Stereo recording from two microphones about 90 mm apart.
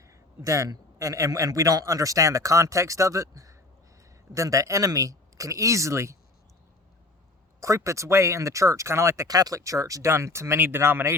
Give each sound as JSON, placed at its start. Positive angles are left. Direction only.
{"t": 0.0, "sound": "a man's voice", "side_deg": -35}
{"t": 7.6, "sound": "speech", "side_deg": -35}